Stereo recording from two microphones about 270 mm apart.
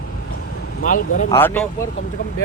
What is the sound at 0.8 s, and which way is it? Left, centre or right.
Speech, left.